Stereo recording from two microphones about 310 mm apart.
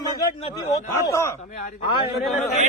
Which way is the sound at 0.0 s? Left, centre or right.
Centre.